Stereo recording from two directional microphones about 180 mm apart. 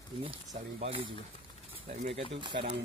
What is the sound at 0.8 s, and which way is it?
Speech, 30° right (ahead or behind).